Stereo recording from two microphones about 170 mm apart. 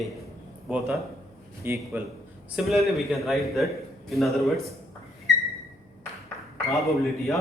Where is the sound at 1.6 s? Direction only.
10° right (ahead or behind).